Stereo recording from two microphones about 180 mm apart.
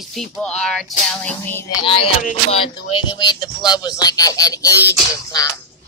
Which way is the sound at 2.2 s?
45° left (ahead or behind).